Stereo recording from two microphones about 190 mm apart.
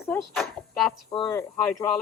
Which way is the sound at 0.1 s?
5° left (ahead or behind).